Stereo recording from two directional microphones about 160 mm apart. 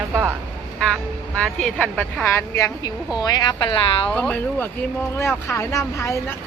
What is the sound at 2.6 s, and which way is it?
Speech, 20° left (ahead or behind).